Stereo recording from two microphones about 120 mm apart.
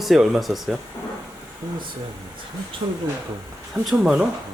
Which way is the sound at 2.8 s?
40° right (ahead or behind).